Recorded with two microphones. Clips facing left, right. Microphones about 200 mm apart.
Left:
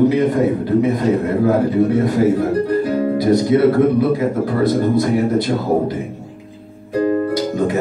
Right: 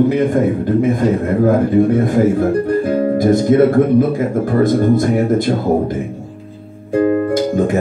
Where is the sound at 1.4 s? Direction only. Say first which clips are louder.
Right 3 dB; 50° right (ahead or behind).